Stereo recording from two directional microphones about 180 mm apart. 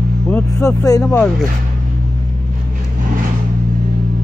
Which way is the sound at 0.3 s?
15° left (ahead or behind).